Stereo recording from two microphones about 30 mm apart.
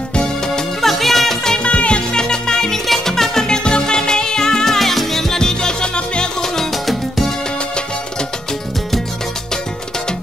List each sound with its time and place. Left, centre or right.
0.2 s music: left
0.7 s music: centre
1.6 s music: left
2.1 s music: left
4.7 s music: centre; by 6.3 s left
6.4 s salsa music: centre
6.7 s music: centre